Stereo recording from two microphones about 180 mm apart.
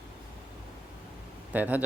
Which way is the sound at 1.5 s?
10° right (ahead or behind).